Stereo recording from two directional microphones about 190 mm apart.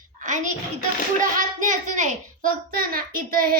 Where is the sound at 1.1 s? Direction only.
45° right (ahead or behind).